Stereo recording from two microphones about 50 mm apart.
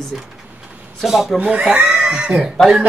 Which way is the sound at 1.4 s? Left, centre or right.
Right.